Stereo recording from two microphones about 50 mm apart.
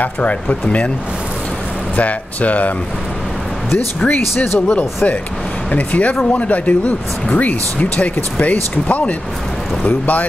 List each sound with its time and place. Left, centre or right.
0.0 s speech: left
2.0 s speech: left
3.7 s speech: left